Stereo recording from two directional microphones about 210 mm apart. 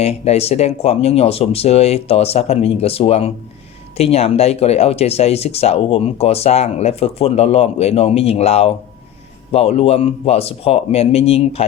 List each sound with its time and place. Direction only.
0.0 s speech: 30° left (ahead or behind)